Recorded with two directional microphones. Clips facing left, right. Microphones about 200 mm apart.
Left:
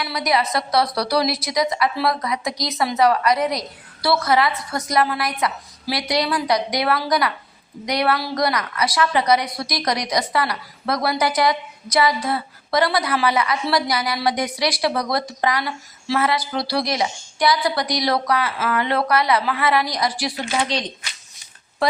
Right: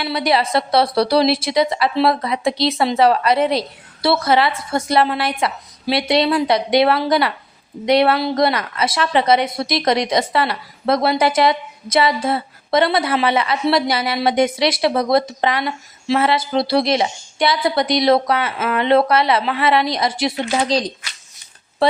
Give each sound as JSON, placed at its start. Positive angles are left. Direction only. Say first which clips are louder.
{"t": 0.0, "sound": "a woman's voice", "louder": "right 3 dB", "side_deg": -30}
{"t": 20.7, "sound": "speech", "louder": "right 6 dB", "side_deg": -35}